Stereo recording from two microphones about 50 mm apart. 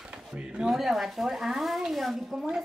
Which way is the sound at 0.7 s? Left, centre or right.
Centre.